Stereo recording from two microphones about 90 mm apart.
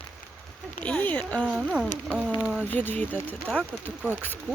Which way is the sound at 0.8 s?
15° left (ahead or behind).